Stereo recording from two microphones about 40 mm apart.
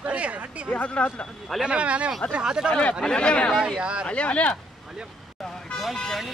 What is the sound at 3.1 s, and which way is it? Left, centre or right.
Speech, left.